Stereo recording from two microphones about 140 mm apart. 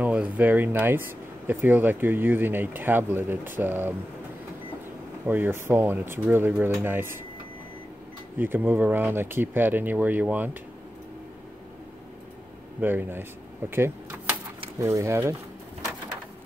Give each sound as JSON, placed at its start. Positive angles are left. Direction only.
{"t": 0.0, "sound": "speech", "side_deg": -10}
{"t": 5.2, "sound": "speech", "side_deg": -15}
{"t": 8.4, "sound": "speech", "side_deg": -15}
{"t": 12.8, "sound": "speech", "side_deg": -15}